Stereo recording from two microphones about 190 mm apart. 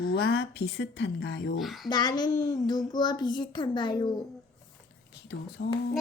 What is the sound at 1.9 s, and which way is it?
A child's voice, 20° left (ahead or behind).